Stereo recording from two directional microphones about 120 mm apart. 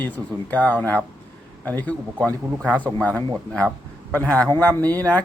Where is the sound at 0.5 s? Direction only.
15° left (ahead or behind).